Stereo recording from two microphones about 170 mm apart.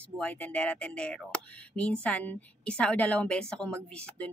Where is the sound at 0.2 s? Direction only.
10° left (ahead or behind).